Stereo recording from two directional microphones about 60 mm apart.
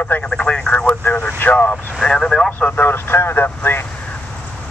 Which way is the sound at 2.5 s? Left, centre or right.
Left.